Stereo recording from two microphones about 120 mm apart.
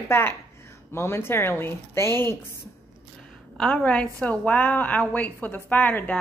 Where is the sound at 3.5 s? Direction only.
10° left (ahead or behind).